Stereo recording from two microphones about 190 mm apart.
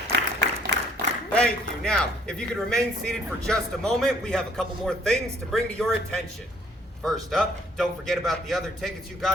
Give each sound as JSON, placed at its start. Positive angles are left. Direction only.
{"t": 0.1, "sound": "applause", "side_deg": -65}
{"t": 1.3, "sound": "a man's voice", "side_deg": 5}